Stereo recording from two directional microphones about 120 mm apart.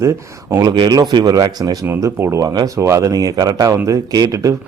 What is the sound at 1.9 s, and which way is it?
Speech, 20° right (ahead or behind).